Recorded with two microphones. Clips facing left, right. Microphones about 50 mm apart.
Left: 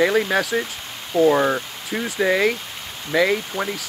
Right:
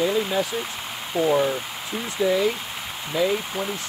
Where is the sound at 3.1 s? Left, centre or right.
Left.